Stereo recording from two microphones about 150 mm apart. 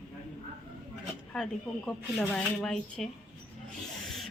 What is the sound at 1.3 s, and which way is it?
A woman's voice, 5° left (ahead or behind).